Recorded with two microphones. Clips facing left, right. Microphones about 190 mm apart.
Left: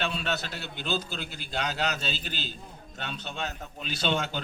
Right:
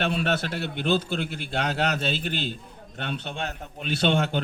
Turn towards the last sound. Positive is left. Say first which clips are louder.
# right 6 dB
turn(degrees=-60)  # may be behind; listen again after turning